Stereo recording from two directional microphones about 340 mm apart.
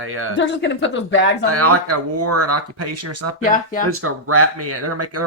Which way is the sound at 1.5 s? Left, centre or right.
Right.